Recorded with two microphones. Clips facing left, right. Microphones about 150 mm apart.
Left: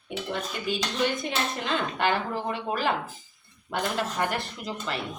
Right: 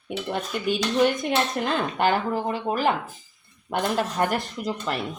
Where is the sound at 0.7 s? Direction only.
50° right (ahead or behind).